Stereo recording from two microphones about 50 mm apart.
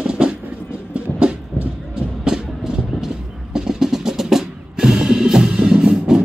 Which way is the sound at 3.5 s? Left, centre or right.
Centre.